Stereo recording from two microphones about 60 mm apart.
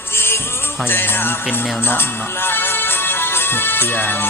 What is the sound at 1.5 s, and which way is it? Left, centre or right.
Speech, left.